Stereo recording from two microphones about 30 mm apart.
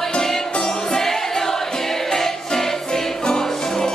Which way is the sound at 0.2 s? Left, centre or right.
Centre.